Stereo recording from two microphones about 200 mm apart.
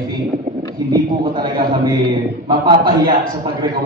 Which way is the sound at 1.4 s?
20° right (ahead or behind).